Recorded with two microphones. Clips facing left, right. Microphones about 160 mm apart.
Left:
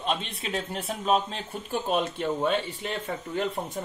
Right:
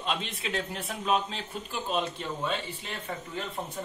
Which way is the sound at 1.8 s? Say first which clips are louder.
Left 4 dB; 50° left (ahead or behind).